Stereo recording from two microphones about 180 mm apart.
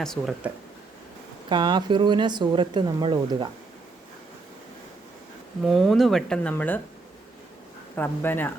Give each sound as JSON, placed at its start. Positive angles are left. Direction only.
{"t": 0.0, "sound": "speech", "side_deg": 5}
{"t": 1.5, "sound": "speech", "side_deg": -25}
{"t": 5.6, "sound": "speech", "side_deg": 0}
{"t": 7.9, "sound": "speech", "side_deg": 10}